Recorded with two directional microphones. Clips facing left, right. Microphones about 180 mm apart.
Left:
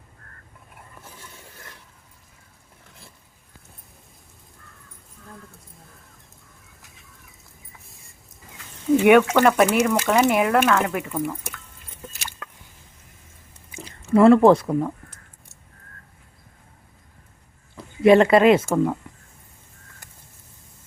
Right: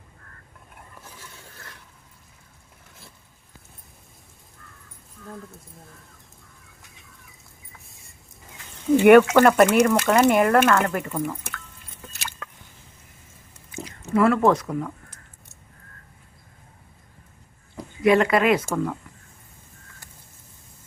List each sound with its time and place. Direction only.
1.5 s a sound: 20° left (ahead or behind)
9.0 s speech: centre (ahead or behind)
13.7 s speech: 30° left (ahead or behind)
18.0 s speech: 25° left (ahead or behind)